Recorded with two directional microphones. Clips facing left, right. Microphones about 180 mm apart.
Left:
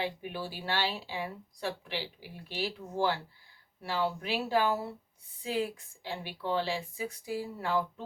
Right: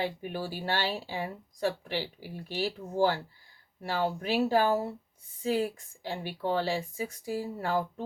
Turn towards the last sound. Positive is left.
turn(degrees=-45)  # may be behind; listen again after turning